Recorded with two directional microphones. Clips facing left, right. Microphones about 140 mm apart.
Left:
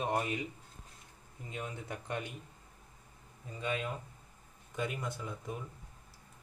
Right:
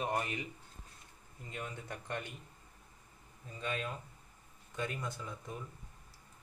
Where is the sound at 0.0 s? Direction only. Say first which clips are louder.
Left 2 dB; 15° left (ahead or behind).